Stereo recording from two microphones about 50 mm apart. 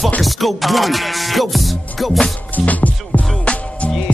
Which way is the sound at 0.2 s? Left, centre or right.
Centre.